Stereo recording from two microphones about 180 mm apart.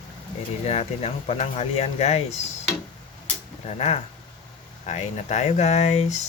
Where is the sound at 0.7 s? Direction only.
35° left (ahead or behind).